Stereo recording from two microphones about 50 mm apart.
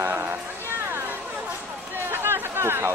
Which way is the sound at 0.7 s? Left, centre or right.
Right.